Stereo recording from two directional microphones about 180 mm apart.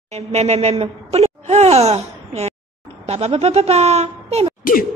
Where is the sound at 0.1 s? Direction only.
35° right (ahead or behind).